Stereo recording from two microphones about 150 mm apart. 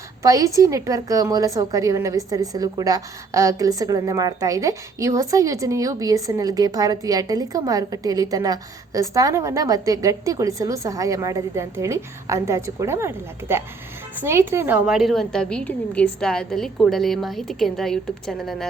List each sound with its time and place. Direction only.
0.2 s a woman's voice: 20° right (ahead or behind); by 18.7 s centre (ahead or behind)